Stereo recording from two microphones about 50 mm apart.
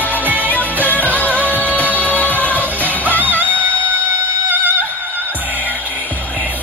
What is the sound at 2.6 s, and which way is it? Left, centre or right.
Music, right.